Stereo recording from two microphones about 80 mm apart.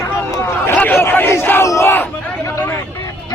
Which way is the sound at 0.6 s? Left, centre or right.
Left.